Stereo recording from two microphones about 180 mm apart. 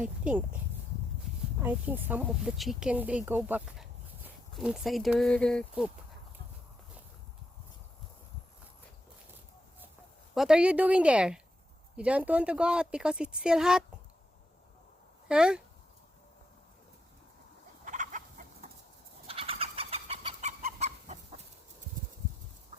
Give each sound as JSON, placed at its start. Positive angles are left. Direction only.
{"t": 0.0, "sound": "speech", "side_deg": -5}
{"t": 1.6, "sound": "speech", "side_deg": -10}
{"t": 10.3, "sound": "speech", "side_deg": -5}
{"t": 15.3, "sound": "speech", "side_deg": -5}
{"t": 17.8, "sound": "chicken", "side_deg": -45}
{"t": 19.3, "sound": "chicken", "side_deg": -30}